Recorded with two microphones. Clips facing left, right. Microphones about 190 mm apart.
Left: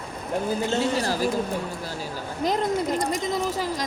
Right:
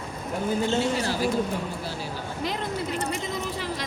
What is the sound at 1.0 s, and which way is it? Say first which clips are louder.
Speech: left 2 dB; 40° left (ahead or behind).